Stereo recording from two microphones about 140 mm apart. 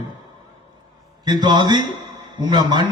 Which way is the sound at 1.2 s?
30° right (ahead or behind).